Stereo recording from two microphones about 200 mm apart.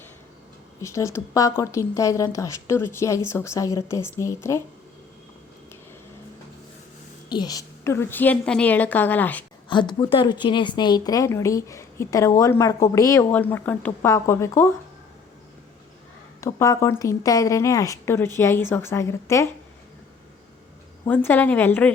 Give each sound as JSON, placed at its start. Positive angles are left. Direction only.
{"t": 0.8, "sound": "a woman's voice", "side_deg": 15}
{"t": 7.3, "sound": "a woman's voice", "side_deg": 20}
{"t": 9.6, "sound": "a woman's voice", "side_deg": 25}
{"t": 16.4, "sound": "a woman's voice", "side_deg": 15}
{"t": 21.1, "sound": "a woman's voice", "side_deg": 10}